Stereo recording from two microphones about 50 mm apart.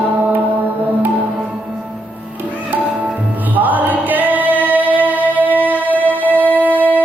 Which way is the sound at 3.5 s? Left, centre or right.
Right.